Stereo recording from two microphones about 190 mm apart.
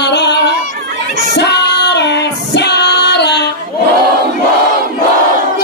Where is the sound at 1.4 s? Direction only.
65° left (ahead or behind).